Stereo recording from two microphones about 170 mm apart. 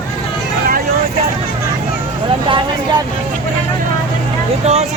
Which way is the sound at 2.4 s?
30° right (ahead or behind).